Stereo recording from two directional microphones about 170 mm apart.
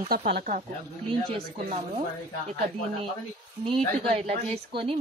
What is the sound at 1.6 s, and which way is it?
Speech, 40° right (ahead or behind).